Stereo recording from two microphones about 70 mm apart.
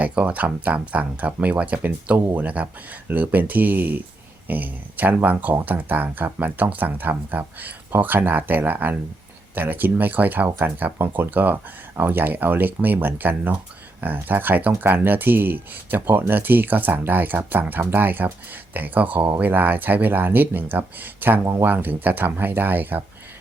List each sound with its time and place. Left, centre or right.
0.0 s speech: centre